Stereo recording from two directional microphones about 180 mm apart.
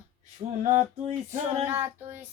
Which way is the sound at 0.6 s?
40° right (ahead or behind).